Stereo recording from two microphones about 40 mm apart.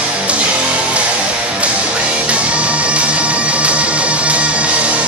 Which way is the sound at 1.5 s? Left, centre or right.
Right.